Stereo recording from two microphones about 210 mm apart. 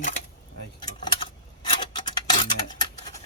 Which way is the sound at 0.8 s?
20° left (ahead or behind).